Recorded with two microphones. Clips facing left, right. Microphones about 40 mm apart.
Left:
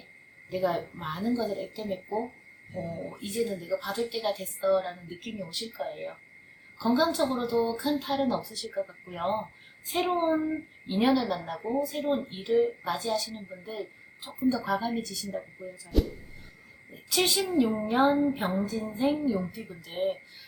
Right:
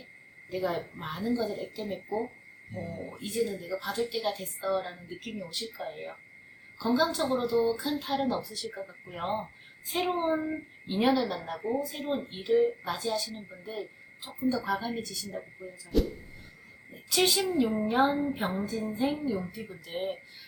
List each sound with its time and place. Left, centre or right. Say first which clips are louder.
0.5 s speech: left 3 dB; centre
2.7 s speech: left 3 dB; left
3.1 s speech: right 1 dB; centre
17.1 s speech: even; centre